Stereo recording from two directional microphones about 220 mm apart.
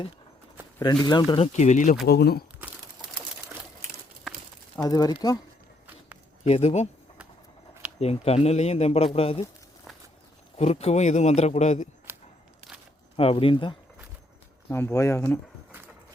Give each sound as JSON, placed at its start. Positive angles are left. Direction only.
{"t": 1.0, "sound": "a man's voice", "side_deg": 20}
{"t": 2.0, "sound": "speech", "side_deg": 45}
{"t": 4.8, "sound": "speech", "side_deg": 15}
{"t": 6.4, "sound": "speech", "side_deg": 30}
{"t": 7.9, "sound": "a man's voice", "side_deg": 30}
{"t": 10.6, "sound": "a man's voice", "side_deg": 30}
{"t": 12.1, "sound": "a sound", "side_deg": -10}
{"t": 13.1, "sound": "a man's voice", "side_deg": 25}
{"t": 14.7, "sound": "speech", "side_deg": 10}